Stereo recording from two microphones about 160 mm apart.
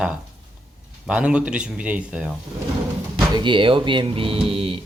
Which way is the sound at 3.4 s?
30° right (ahead or behind).